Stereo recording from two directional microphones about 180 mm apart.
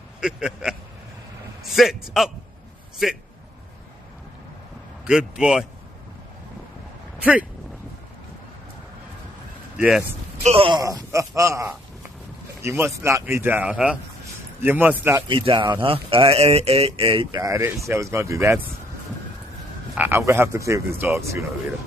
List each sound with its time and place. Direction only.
0.2 s a man's voice: 5° right (ahead or behind)
5.4 s a man's voice: 5° right (ahead or behind)
9.8 s speech: 5° right (ahead or behind)
10.4 s speech: 30° right (ahead or behind)
10.8 s frog: 20° right (ahead or behind)
15.2 s speech: 25° right (ahead or behind)
17.8 s frog: 15° right (ahead or behind)
20.0 s frog: 15° right (ahead or behind)